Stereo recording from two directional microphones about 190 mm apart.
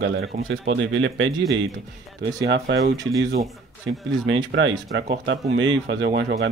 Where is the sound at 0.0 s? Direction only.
55° right (ahead or behind).